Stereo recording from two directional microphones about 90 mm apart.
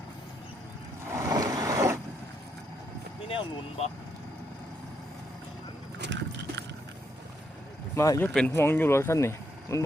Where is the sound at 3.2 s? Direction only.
75° left (ahead or behind).